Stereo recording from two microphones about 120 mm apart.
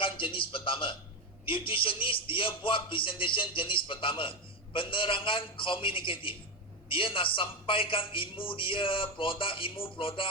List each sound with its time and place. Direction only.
0.0 s a man's voice: 45° left (ahead or behind)